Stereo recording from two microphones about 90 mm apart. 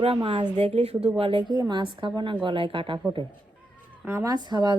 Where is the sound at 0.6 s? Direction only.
90° right.